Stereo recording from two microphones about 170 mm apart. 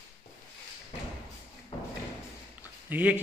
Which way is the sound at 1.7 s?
30° left (ahead or behind).